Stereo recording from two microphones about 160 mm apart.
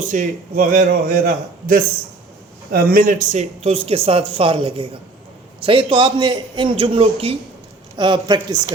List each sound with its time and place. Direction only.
0.0 s a man's voice: 55° right (ahead or behind); by 8.7 s 25° right (ahead or behind)